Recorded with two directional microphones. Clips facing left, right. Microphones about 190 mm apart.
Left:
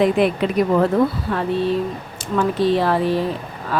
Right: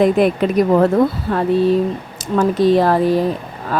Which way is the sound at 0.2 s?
45° right (ahead or behind).